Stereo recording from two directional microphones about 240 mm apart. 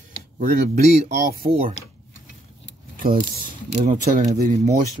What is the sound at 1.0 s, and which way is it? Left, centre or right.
Speech, right.